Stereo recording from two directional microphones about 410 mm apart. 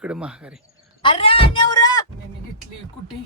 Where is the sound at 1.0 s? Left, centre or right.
Centre.